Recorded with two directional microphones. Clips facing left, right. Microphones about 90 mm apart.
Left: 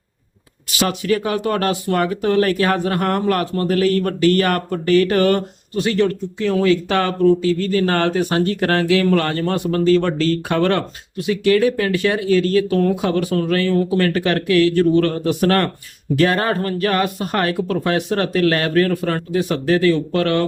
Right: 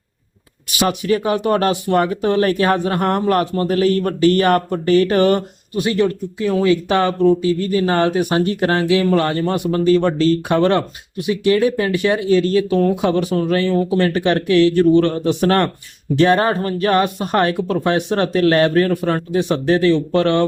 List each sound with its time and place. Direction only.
0.8 s speech: 25° right (ahead or behind)